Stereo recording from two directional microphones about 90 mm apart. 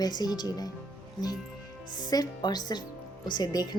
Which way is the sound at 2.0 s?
45° left (ahead or behind).